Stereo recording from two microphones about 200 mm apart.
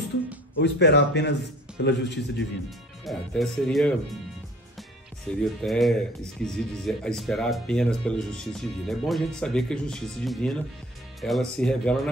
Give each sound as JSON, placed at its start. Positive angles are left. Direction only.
{"t": 0.6, "sound": "speech", "side_deg": 60}
{"t": 3.1, "sound": "speech", "side_deg": 0}
{"t": 5.3, "sound": "speech", "side_deg": 0}